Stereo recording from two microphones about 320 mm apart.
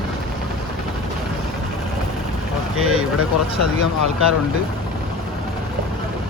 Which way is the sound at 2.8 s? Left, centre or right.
Right.